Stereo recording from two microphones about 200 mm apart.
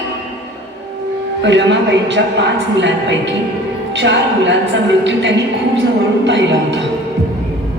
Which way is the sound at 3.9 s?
60° right (ahead or behind).